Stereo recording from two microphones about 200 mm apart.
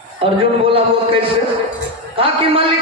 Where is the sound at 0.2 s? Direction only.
30° right (ahead or behind).